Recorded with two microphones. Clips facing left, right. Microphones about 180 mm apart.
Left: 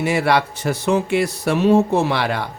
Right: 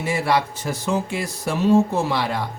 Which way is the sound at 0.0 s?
70° left (ahead or behind).